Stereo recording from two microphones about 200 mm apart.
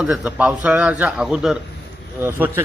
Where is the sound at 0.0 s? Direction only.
5° right (ahead or behind).